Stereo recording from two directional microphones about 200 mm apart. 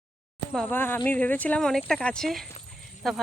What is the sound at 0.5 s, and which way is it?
Speech, 5° left (ahead or behind).